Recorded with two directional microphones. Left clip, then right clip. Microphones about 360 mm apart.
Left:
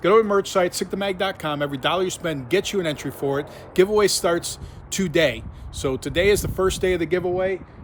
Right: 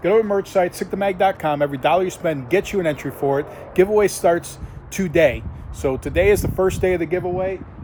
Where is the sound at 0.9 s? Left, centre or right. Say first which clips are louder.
Right 6 dB; centre.